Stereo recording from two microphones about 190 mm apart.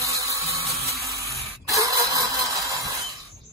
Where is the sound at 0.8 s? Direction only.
15° right (ahead or behind).